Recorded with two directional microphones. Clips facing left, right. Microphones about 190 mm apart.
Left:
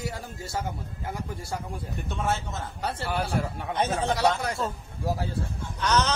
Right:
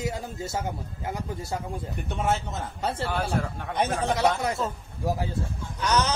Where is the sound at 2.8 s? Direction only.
25° right (ahead or behind).